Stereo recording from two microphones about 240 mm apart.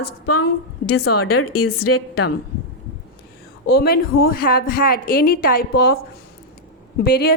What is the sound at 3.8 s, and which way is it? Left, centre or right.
A woman's voice, left.